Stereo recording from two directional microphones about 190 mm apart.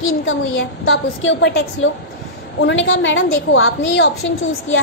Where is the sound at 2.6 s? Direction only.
90° left.